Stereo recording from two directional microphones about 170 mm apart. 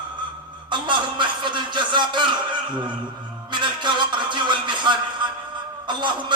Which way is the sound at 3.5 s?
25° right (ahead or behind).